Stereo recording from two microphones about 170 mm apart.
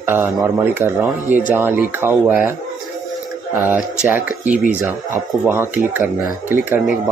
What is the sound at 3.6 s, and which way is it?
Speech, 10° right (ahead or behind).